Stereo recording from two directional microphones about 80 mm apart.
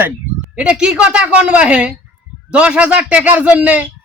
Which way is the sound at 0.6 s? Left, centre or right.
Centre.